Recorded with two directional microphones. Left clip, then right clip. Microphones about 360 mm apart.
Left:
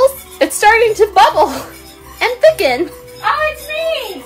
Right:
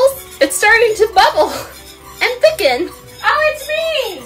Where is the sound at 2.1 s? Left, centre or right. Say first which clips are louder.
Left 2 dB; centre.